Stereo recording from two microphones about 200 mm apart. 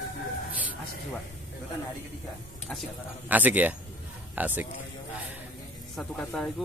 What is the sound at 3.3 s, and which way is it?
Speech, 10° right (ahead or behind).